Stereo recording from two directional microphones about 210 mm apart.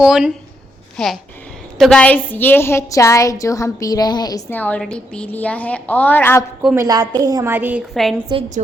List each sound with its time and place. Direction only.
0.0 s a woman's voice: 5° right (ahead or behind)
6.7 s a woman's voice: 15° right (ahead or behind)
8.3 s a woman's voice: 30° right (ahead or behind)